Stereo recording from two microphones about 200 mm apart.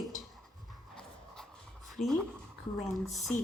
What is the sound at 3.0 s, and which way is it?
Speech, centre (ahead or behind).